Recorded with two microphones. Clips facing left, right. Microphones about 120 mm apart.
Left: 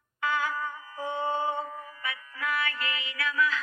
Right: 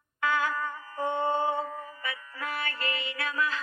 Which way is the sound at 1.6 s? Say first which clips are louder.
Right 1 dB; 35° right (ahead or behind).